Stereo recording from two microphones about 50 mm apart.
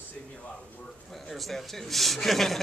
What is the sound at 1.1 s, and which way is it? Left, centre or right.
Speech, centre.